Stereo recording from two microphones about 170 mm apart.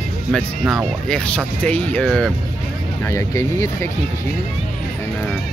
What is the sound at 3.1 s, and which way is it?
Speech, 15° left (ahead or behind).